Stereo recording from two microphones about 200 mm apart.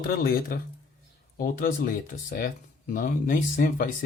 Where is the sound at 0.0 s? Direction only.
50° left (ahead or behind).